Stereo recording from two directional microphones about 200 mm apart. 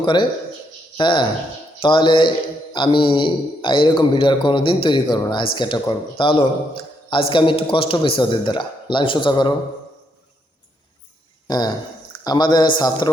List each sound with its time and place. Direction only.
0.0 s a man's voice: 20° left (ahead or behind)
11.4 s a man's voice: 20° left (ahead or behind)